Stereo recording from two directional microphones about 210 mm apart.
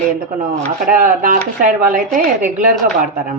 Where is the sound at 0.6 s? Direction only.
40° right (ahead or behind).